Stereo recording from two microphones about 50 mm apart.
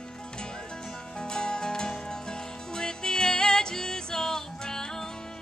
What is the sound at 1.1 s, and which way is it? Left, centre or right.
Music, centre.